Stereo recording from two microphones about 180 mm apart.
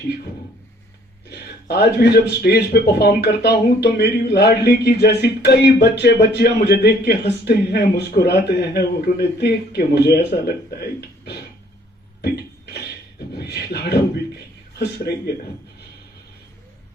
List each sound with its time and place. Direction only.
1.3 s speech: 65° left (ahead or behind)
12.2 s a sound: 65° left (ahead or behind)
13.3 s speech: 65° left (ahead or behind)